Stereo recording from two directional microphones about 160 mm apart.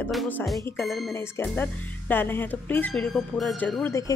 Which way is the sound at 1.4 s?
10° left (ahead or behind).